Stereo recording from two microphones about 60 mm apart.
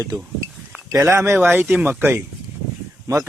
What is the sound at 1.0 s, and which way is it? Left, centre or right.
Speech, right.